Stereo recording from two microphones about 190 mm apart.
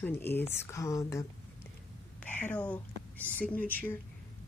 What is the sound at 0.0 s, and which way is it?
Speech, 10° left (ahead or behind).